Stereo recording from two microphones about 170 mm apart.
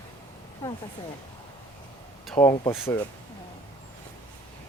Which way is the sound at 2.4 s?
30° left (ahead or behind).